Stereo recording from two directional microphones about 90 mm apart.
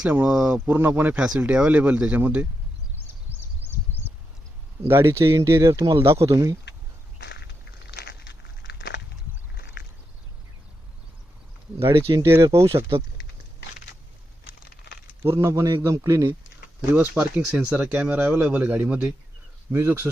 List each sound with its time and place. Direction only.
0.0 s speech: 15° right (ahead or behind)
3.6 s a sound: 20° right (ahead or behind)
4.9 s speech: 30° right (ahead or behind)
5.7 s speech: 55° right (ahead or behind)
6.1 s speech: 35° right (ahead or behind)
12.3 s speech: 30° right (ahead or behind)
15.2 s speech: 30° right (ahead or behind)
16.9 s speech: 15° right (ahead or behind)
19.7 s speech: 25° right (ahead or behind)